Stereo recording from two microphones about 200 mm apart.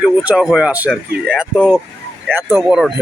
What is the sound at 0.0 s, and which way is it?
Speech, 5° right (ahead or behind).